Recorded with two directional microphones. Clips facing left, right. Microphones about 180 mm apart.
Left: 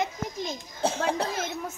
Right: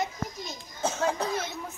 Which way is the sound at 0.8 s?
30° left (ahead or behind).